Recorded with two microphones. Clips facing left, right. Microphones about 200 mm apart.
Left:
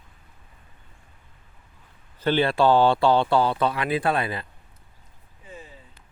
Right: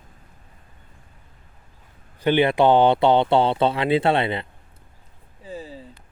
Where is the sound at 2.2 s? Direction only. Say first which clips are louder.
Right 3 dB; 15° right (ahead or behind).